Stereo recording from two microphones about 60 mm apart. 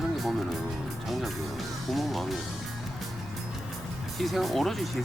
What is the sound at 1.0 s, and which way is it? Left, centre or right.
Music, centre.